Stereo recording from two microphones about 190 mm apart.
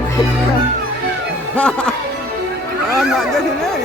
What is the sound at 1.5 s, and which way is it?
Speech, 5° left (ahead or behind).